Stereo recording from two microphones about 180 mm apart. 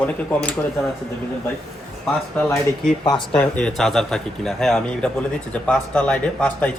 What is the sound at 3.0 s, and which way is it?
Speech, 25° left (ahead or behind).